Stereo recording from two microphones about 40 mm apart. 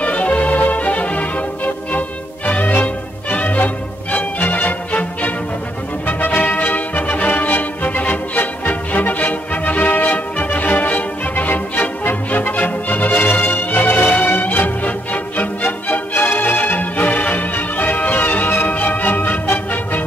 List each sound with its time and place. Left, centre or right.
0.0 s music: left
2.7 s music: left